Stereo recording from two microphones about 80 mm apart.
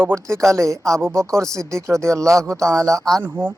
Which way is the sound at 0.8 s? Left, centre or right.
Centre.